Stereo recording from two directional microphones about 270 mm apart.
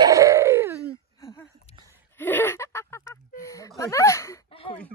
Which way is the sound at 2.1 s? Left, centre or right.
Centre.